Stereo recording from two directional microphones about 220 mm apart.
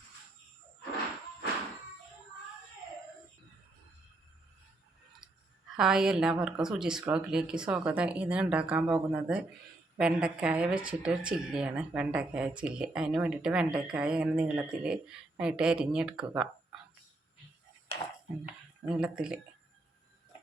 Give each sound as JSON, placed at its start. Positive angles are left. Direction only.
{"t": 5.7, "sound": "speech", "side_deg": 0}
{"t": 18.4, "sound": "speech", "side_deg": -5}